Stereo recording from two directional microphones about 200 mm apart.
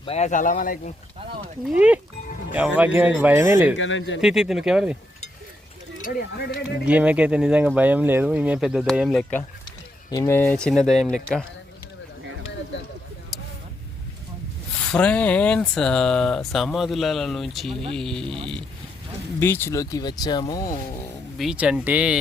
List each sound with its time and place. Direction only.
0.0 s speech: 30° left (ahead or behind)
1.6 s speech: 5° right (ahead or behind)
3.8 s speech: 70° left (ahead or behind)
4.2 s speech: 5° right (ahead or behind)
6.0 s speech: 45° left (ahead or behind)
6.8 s speech: 5° right (ahead or behind)
10.1 s speech: 15° left (ahead or behind)
14.8 s speech: 5° left (ahead or behind)
19.4 s speech: 10° left (ahead or behind)
21.3 s speech: 5° right (ahead or behind)